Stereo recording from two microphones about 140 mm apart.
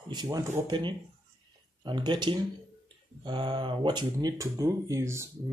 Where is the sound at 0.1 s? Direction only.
25° right (ahead or behind).